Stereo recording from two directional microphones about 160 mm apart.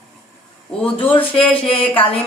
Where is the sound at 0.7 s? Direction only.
5° left (ahead or behind).